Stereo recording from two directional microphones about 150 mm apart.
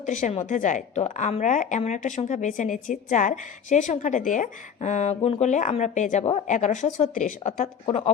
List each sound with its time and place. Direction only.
0.0 s a woman's voice: 55° left (ahead or behind)
7.9 s speech: 45° left (ahead or behind)